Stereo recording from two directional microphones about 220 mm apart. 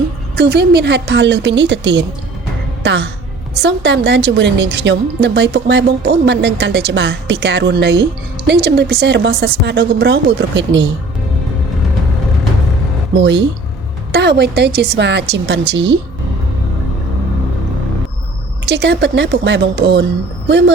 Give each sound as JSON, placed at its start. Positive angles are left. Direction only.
{"t": 0.3, "sound": "speech", "side_deg": -50}
{"t": 14.1, "sound": "speech", "side_deg": -50}
{"t": 18.7, "sound": "speech", "side_deg": -50}